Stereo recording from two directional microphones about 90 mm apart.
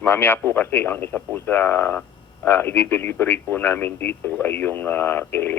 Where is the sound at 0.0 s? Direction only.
20° left (ahead or behind).